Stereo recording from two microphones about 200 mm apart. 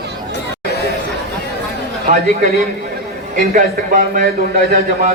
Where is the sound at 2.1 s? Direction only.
45° right (ahead or behind).